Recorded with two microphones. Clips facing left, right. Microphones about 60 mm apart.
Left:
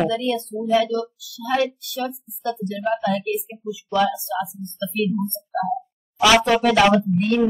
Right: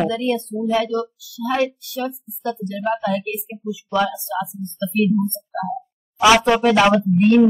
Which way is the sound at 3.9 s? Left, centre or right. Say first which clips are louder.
Even; centre.